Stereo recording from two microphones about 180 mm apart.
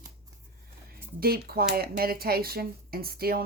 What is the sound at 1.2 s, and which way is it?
A woman's voice, 60° right (ahead or behind).